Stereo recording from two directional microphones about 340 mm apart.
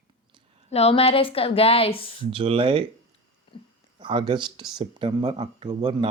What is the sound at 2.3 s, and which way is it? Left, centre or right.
Speech, centre.